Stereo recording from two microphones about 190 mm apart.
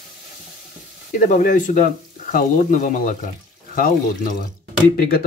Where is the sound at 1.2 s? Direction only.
40° left (ahead or behind).